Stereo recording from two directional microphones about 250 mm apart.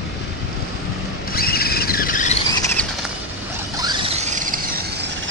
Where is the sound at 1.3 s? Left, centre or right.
Left.